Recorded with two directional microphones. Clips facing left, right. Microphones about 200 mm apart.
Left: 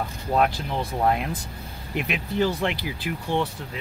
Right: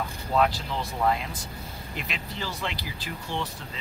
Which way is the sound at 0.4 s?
55° left (ahead or behind).